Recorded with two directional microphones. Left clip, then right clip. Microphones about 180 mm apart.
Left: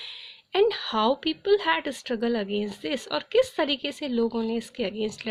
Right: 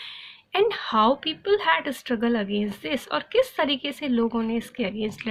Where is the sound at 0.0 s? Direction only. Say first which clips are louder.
Even; 40° left (ahead or behind).